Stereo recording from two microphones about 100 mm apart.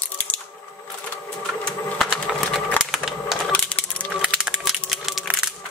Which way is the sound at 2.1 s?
Centre (ahead or behind).